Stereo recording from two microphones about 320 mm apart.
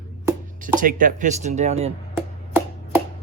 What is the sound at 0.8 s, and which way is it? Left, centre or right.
Speech, right.